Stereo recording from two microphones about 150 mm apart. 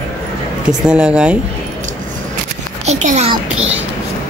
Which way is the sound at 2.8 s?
50° right (ahead or behind).